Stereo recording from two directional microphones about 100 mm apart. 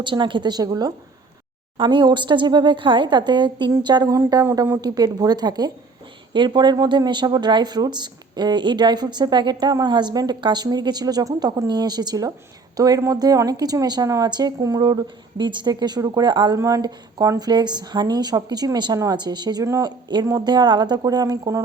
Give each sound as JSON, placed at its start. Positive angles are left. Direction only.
{"t": 0.0, "sound": "speech", "side_deg": -55}
{"t": 1.8, "sound": "a woman's voice", "side_deg": -55}
{"t": 16.6, "sound": "speech", "side_deg": -35}
{"t": 19.6, "sound": "a woman's voice", "side_deg": -30}